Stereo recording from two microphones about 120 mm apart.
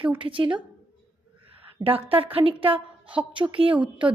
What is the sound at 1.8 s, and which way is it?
A woman's voice, 50° right (ahead or behind).